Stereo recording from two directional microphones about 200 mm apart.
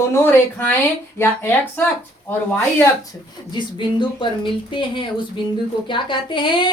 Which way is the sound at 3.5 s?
25° left (ahead or behind).